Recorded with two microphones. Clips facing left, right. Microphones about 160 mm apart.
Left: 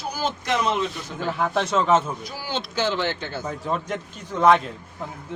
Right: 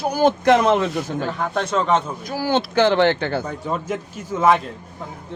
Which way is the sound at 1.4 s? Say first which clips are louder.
Left 1 dB; centre (ahead or behind).